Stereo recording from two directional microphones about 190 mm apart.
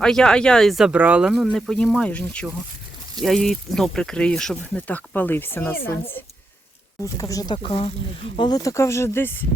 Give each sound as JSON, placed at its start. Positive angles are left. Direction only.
{"t": 0.0, "sound": "speech", "side_deg": 5}